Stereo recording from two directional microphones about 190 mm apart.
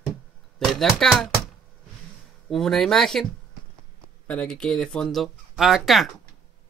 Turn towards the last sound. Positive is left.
turn(degrees=0)  # may be behind; listen again after turning